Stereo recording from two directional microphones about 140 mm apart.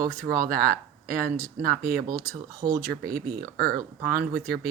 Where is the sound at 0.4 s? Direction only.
90° right.